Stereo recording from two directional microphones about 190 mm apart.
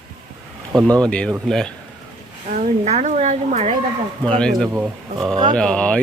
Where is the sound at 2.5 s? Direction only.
35° right (ahead or behind).